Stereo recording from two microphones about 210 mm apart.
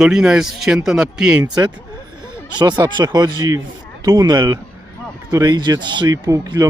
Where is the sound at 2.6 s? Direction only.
20° right (ahead or behind).